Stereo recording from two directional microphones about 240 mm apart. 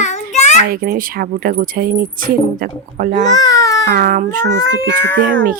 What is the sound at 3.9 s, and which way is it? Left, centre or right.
Speech, right.